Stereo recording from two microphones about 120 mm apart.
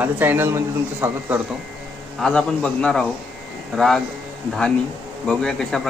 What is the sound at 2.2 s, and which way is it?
A man's voice, 5° left (ahead or behind).